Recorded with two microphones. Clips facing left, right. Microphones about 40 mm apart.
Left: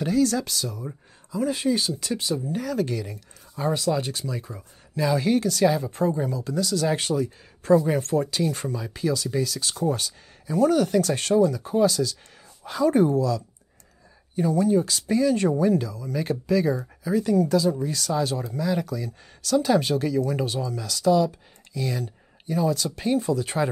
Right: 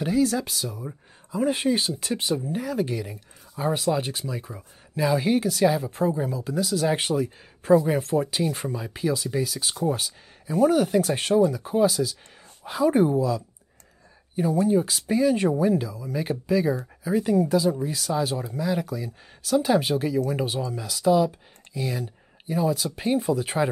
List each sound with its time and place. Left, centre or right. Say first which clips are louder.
0.0 s speech: left 1 dB; centre
1.3 s speech: right 1 dB; right
2.4 s speech: left 1 dB; centre
17.1 s speech: even; right